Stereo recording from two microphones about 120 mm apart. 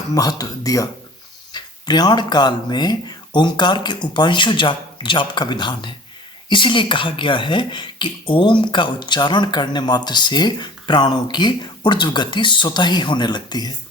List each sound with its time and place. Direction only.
0.1 s speech: 30° left (ahead or behind)